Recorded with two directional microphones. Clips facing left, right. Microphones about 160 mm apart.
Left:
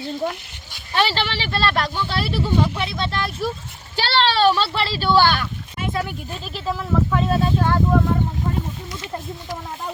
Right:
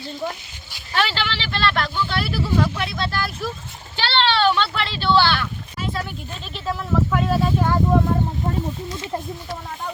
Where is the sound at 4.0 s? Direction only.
40° left (ahead or behind).